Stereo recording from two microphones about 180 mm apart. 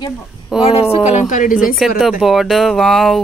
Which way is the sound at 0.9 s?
40° left (ahead or behind).